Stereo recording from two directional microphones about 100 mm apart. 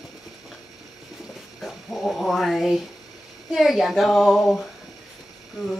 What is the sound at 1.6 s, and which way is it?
Dog, centre (ahead or behind).